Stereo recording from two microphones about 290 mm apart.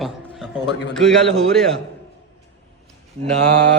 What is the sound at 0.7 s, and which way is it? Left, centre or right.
Speech, left.